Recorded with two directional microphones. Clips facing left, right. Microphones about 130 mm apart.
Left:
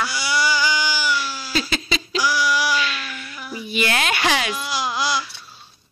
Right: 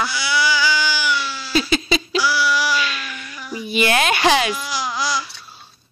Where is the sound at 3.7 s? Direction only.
20° right (ahead or behind).